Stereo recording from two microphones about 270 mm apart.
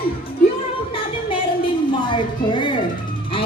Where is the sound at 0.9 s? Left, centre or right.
Centre.